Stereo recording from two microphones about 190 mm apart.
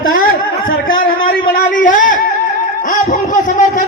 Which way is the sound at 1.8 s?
45° left (ahead or behind).